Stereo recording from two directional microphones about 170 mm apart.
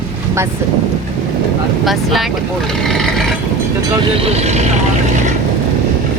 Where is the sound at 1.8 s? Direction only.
Centre (ahead or behind).